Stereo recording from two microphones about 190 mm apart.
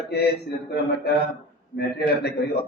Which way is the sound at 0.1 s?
60° left (ahead or behind).